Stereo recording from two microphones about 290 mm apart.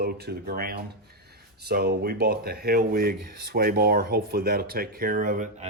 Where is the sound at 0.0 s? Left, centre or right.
Right.